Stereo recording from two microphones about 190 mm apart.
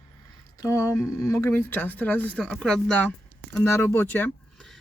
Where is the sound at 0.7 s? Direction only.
15° left (ahead or behind).